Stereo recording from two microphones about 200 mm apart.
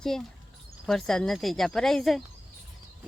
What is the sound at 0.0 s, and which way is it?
Speech, centre (ahead or behind).